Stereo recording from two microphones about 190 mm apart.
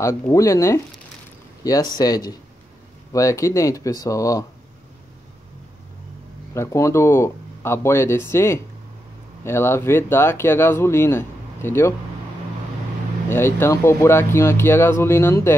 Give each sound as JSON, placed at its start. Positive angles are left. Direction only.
{"t": 0.0, "sound": "speech", "side_deg": 15}
{"t": 6.5, "sound": "speech", "side_deg": 15}
{"t": 13.3, "sound": "speech", "side_deg": 10}